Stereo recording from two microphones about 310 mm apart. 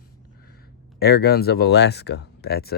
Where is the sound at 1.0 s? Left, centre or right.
Left.